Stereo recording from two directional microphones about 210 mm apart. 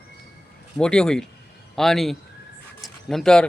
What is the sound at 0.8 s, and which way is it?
Speech, 5° left (ahead or behind).